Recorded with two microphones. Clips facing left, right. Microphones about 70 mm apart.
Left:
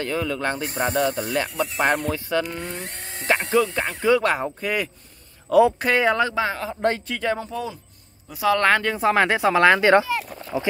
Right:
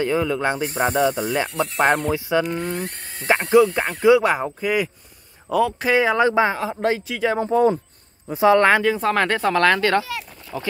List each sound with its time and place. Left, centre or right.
0.0 s speech: centre
2.1 s speech: centre
4.0 s speech: centre
6.1 s speech: right
6.6 s speech: centre
7.3 s speech: right
8.5 s speech: centre
8.8 s speech: centre; by 10.7 s left